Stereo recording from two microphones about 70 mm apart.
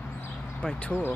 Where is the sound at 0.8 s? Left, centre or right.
Left.